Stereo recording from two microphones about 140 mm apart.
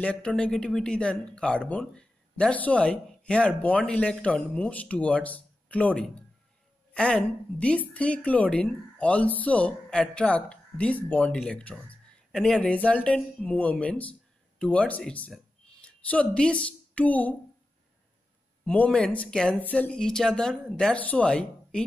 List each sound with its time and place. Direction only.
0.0 s speech: 10° left (ahead or behind)
18.7 s speech: 10° left (ahead or behind)